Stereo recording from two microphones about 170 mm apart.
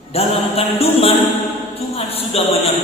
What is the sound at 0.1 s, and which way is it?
Music, 35° left (ahead or behind).